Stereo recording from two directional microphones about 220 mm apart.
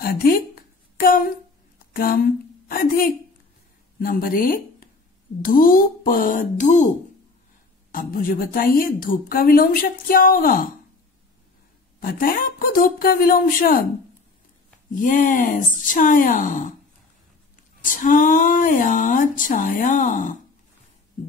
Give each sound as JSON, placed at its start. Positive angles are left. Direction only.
{"t": 0.0, "sound": "a sound", "side_deg": 40}
{"t": 2.7, "sound": "a woman's voice", "side_deg": 40}
{"t": 12.0, "sound": "a woman's voice", "side_deg": 40}
{"t": 15.0, "sound": "a woman's voice", "side_deg": 35}
{"t": 17.8, "sound": "a woman's voice", "side_deg": 35}